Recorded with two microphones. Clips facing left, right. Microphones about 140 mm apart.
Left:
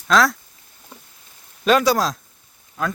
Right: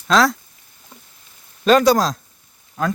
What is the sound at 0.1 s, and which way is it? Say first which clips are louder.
Speech: right 1 dB; centre (ahead or behind).